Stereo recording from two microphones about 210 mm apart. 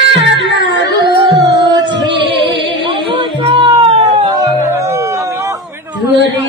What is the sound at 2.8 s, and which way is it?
Music, 25° right (ahead or behind).